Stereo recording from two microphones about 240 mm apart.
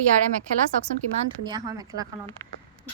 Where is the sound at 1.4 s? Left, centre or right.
Centre.